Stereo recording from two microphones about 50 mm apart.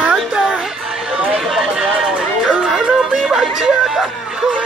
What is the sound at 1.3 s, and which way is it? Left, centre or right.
Run, centre.